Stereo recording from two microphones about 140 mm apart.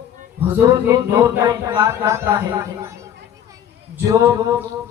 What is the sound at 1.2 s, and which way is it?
Speech, 20° right (ahead or behind).